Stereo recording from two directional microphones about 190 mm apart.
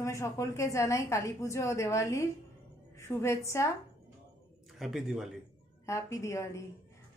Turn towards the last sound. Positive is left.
turn(degrees=15)  # may be behind; listen again after turning